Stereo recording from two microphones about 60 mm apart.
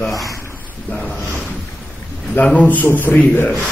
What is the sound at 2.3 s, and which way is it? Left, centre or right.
Speech, left.